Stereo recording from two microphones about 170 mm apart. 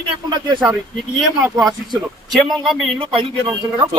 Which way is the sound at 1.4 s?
5° right (ahead or behind).